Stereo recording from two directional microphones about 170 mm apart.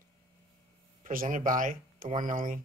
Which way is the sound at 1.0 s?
50° right (ahead or behind).